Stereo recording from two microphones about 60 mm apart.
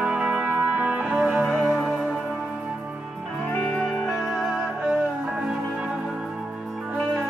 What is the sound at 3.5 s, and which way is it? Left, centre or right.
Music, left.